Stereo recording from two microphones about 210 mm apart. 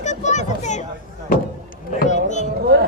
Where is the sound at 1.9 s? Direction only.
35° left (ahead or behind).